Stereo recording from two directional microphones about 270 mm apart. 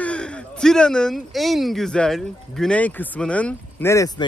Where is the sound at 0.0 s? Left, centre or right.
Centre.